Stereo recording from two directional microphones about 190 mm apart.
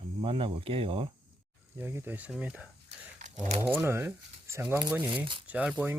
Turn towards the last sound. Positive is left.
turn(degrees=-5)  # may be behind; listen again after turning